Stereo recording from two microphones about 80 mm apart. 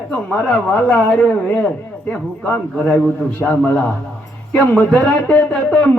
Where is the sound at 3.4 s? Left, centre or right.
Left.